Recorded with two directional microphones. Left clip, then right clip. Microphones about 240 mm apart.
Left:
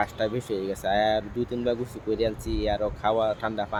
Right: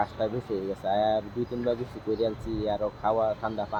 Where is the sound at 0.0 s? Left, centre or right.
Centre.